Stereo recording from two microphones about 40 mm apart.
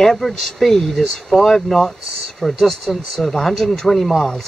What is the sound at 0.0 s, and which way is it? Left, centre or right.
Speech, centre.